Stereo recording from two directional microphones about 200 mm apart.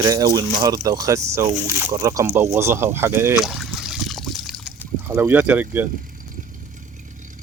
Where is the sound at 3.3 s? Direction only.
Centre (ahead or behind).